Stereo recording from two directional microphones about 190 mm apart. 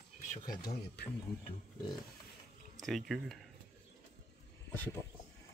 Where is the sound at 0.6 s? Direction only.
55° left (ahead or behind).